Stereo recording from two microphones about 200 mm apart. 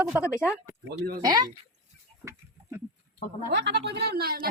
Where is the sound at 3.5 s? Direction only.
60° right (ahead or behind).